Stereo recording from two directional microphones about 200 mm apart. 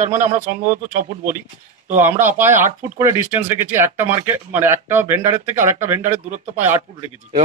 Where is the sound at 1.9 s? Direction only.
10° right (ahead or behind).